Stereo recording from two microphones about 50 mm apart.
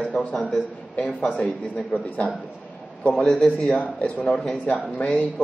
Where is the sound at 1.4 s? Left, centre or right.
Centre.